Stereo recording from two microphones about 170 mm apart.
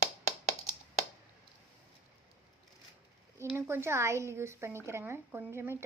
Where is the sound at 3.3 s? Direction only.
15° right (ahead or behind).